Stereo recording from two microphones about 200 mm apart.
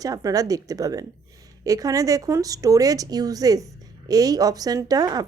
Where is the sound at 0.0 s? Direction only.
20° right (ahead or behind).